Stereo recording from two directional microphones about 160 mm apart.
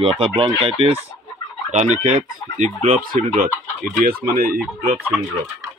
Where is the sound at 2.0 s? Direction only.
50° right (ahead or behind); by 4.6 s 70° right (ahead or behind).